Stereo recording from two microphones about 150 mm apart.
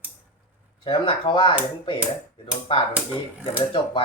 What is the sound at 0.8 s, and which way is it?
Speech, 35° left (ahead or behind).